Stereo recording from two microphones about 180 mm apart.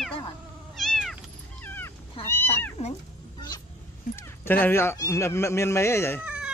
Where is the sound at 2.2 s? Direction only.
30° left (ahead or behind).